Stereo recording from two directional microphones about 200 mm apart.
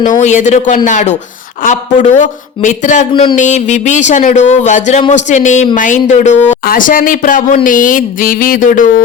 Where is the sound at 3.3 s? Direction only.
35° left (ahead or behind).